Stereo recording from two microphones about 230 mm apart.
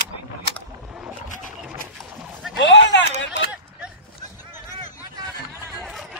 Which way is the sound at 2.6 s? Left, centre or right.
Left.